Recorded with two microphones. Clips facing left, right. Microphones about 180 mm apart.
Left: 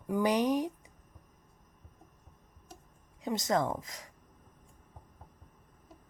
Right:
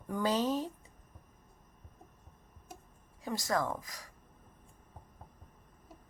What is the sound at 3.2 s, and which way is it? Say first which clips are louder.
Speech: left 3 dB; 20° left (ahead or behind).